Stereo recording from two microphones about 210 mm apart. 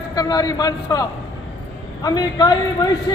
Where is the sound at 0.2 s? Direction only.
15° left (ahead or behind).